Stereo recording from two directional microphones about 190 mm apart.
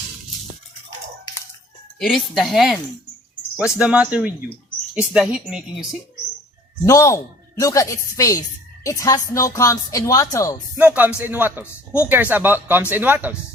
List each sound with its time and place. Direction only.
2.0 s speech: centre (ahead or behind)
6.8 s a woman's voice: 15° left (ahead or behind)
10.8 s speech: 10° right (ahead or behind)